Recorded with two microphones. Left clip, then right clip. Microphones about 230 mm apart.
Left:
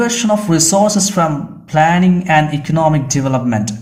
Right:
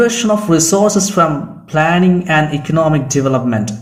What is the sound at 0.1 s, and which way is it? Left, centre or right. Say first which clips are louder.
Speech: right 1 dB; left.